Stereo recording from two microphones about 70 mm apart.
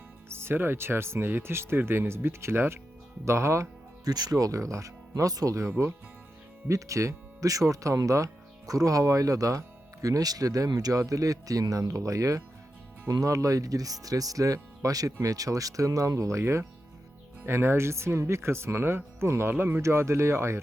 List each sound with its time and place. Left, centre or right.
0.3 s speech: right
4.0 s speech: right
6.7 s speech: right
11.0 s speech: right